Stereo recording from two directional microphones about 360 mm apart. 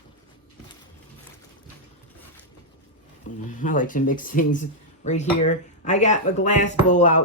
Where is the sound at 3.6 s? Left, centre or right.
Left.